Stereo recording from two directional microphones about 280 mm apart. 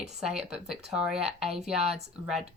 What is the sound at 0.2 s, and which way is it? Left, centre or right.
Speech, centre.